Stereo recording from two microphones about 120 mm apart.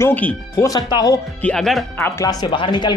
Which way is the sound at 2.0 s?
30° left (ahead or behind).